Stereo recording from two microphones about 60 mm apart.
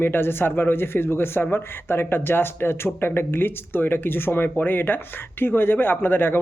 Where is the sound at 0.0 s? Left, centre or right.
Left.